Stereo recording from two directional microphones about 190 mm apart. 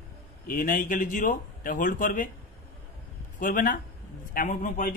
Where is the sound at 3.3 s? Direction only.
45° left (ahead or behind).